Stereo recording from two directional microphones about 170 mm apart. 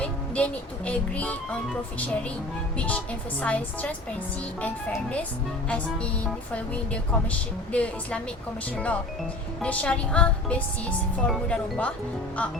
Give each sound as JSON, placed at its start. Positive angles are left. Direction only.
{"t": 0.0, "sound": "speech", "side_deg": 10}
{"t": 2.7, "sound": "speech", "side_deg": 10}